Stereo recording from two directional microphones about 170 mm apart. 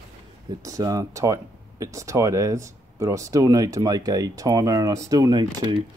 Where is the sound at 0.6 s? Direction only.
20° right (ahead or behind).